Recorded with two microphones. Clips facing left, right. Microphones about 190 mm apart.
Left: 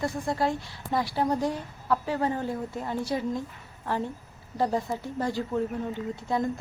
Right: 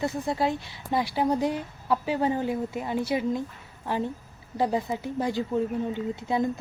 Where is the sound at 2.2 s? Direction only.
10° right (ahead or behind).